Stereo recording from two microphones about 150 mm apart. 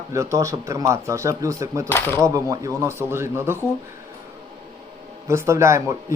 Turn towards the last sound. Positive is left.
turn(degrees=-20)  # may be behind; listen again after turning